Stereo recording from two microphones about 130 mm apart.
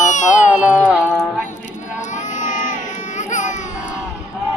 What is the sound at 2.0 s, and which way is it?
Baby cry, 70° left (ahead or behind).